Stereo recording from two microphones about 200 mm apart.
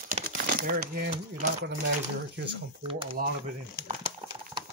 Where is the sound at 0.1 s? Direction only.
40° right (ahead or behind).